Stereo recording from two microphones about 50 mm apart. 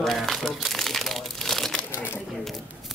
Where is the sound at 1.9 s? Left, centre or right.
Left.